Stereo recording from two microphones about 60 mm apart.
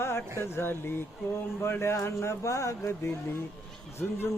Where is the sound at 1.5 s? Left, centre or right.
Left.